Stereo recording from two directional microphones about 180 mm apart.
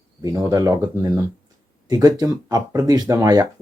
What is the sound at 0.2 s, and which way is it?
Speech, 20° right (ahead or behind).